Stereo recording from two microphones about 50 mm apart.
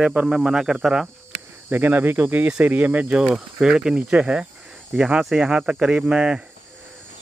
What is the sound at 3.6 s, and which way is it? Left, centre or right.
Speech, centre.